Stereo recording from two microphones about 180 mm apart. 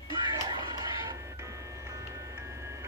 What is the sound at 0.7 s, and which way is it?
Music, 15° right (ahead or behind).